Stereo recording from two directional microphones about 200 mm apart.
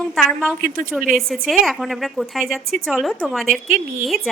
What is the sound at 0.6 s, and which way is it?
Speech, 45° right (ahead or behind).